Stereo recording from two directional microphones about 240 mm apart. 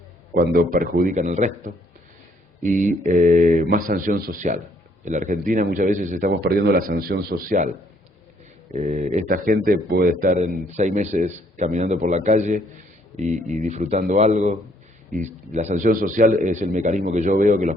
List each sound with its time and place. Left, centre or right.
0.3 s a man's voice: right
8.7 s a man's voice: right